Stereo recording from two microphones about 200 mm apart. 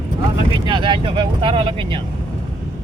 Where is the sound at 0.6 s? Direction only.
25° right (ahead or behind).